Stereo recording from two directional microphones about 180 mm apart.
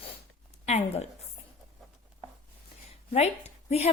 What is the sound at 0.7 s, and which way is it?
Speech, 40° left (ahead or behind).